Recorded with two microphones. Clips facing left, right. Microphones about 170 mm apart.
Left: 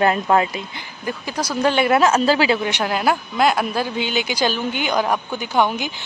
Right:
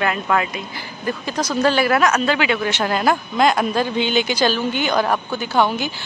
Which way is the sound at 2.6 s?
10° left (ahead or behind).